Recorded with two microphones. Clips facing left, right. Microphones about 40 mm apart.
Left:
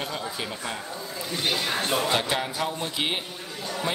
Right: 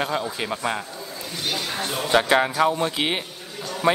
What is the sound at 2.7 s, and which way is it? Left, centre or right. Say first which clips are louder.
Speech: right 5 dB; right.